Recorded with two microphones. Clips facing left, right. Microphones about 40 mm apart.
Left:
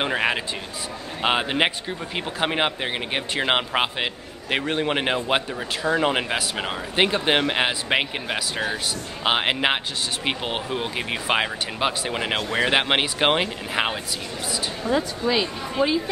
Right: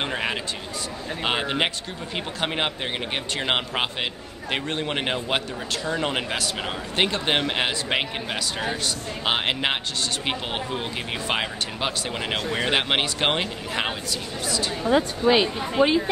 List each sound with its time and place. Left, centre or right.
0.0 s a sound: centre
1.2 s speech: centre
14.9 s speech: right